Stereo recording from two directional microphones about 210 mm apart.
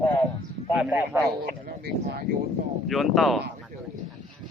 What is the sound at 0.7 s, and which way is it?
Speech, 5° right (ahead or behind).